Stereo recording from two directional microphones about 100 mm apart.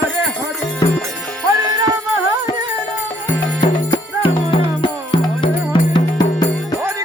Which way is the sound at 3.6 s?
55° left (ahead or behind).